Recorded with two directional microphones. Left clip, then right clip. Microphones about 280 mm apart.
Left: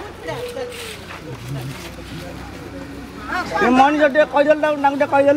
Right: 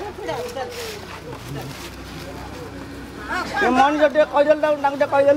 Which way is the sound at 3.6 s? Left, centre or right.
Left.